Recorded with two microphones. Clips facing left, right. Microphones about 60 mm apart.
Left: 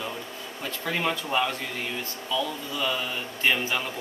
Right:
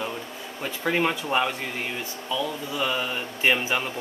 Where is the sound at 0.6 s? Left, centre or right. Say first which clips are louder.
Right 4 dB; centre.